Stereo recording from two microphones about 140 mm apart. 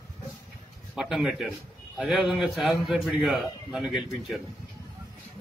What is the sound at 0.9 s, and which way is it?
Speech, centre (ahead or behind).